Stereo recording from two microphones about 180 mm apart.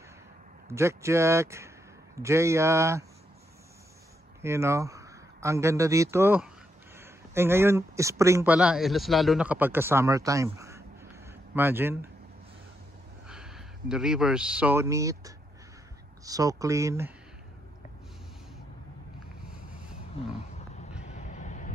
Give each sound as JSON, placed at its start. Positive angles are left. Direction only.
{"t": 0.7, "sound": "speech", "side_deg": -15}
{"t": 4.4, "sound": "a man's voice", "side_deg": -15}
{"t": 8.5, "sound": "a man's voice", "side_deg": -5}
{"t": 13.3, "sound": "speech", "side_deg": -5}
{"t": 21.1, "sound": "vehicle", "side_deg": 40}